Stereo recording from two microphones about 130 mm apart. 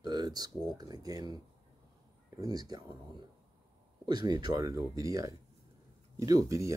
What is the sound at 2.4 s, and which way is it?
Speech, 30° right (ahead or behind).